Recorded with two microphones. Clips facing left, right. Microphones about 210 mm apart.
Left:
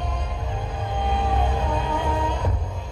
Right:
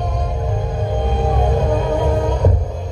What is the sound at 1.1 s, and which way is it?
Music, 45° right (ahead or behind).